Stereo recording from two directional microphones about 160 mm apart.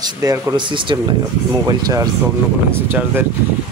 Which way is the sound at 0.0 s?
20° right (ahead or behind).